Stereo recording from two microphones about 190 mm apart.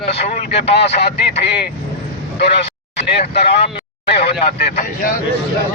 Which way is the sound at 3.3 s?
60° left (ahead or behind).